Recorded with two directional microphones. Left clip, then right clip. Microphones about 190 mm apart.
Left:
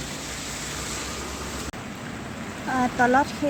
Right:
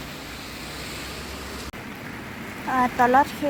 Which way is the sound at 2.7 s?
10° right (ahead or behind).